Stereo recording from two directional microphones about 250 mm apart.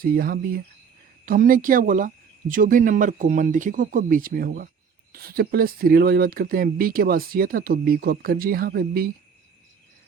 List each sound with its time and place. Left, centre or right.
0.0 s speech: right